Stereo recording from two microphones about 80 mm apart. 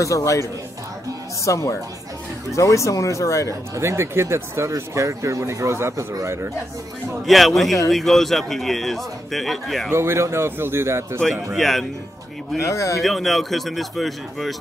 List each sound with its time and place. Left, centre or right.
0.0 s speech: left
3.4 s speech: right
7.2 s a man's voice: centre
9.8 s speech: right
11.5 s a man's voice: centre
12.5 s speech: left
13.0 s a man's voice: centre